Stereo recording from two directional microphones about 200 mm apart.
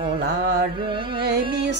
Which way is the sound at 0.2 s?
55° right (ahead or behind).